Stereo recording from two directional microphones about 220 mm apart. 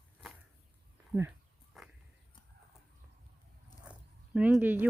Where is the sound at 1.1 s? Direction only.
5° right (ahead or behind).